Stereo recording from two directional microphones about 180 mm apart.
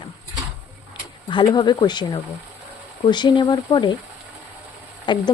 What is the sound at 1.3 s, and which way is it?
Speech, 25° left (ahead or behind).